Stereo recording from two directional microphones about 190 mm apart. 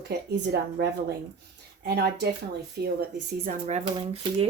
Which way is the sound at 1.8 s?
60° right (ahead or behind).